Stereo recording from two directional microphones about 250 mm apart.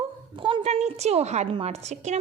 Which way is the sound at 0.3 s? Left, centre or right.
Centre.